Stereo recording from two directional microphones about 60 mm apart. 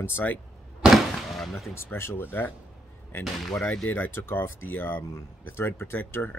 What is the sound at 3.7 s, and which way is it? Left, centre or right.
Speech, left.